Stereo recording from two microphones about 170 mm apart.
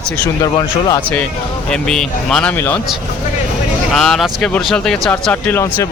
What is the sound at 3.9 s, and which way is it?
A man's voice, centre (ahead or behind).